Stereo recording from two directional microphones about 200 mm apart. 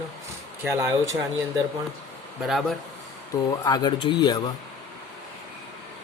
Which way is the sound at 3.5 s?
20° left (ahead or behind).